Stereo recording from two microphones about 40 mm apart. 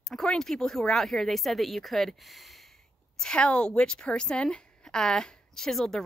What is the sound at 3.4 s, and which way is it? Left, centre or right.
A woman's voice, left.